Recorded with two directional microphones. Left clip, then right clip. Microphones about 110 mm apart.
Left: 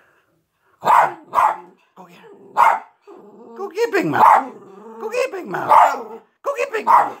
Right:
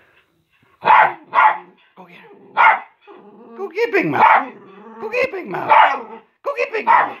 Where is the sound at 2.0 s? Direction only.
30° left (ahead or behind).